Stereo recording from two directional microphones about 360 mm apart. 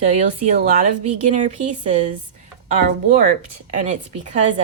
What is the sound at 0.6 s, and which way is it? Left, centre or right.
A woman's voice, centre.